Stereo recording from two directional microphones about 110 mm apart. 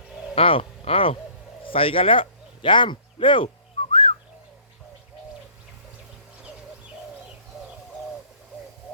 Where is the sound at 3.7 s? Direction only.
55° left (ahead or behind).